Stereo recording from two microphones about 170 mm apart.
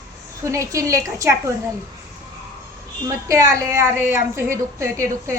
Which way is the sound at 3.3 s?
20° right (ahead or behind).